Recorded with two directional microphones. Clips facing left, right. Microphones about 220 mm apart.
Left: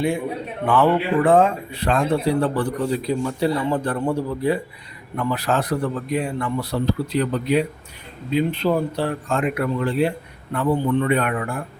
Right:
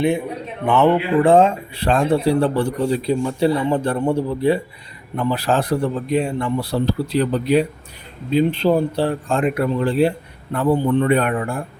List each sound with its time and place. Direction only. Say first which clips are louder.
0.6 s speech: right 2 dB; 25° right (ahead or behind)